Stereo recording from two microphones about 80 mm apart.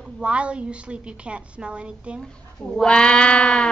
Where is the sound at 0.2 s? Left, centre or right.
Centre.